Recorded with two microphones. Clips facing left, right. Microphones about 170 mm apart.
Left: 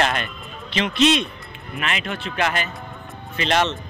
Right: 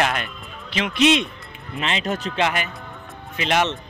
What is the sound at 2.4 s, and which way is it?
Speech, 20° right (ahead or behind).